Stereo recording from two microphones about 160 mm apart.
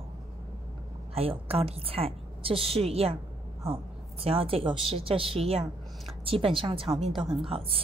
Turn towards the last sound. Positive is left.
turn(degrees=-35)  # may be behind; listen again after turning